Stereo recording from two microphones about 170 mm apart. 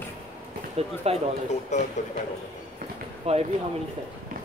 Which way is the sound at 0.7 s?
35° right (ahead or behind).